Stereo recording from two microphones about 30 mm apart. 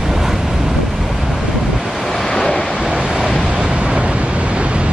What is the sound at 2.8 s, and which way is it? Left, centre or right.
Waves, right.